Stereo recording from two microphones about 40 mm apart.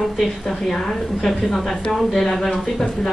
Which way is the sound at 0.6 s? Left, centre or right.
Centre.